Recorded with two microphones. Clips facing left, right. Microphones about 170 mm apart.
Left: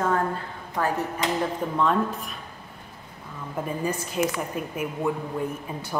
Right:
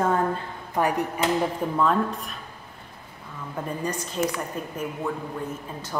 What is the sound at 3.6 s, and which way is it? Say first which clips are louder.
A woman's voice: left 2 dB; 5° left (ahead or behind).